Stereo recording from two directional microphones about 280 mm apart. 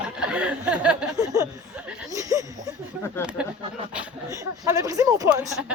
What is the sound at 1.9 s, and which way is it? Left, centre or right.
Chuckle, centre.